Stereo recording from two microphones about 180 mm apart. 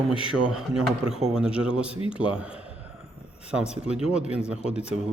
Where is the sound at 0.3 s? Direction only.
5° right (ahead or behind).